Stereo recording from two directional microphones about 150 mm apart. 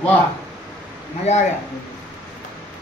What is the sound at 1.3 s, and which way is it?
Speech, 45° left (ahead or behind).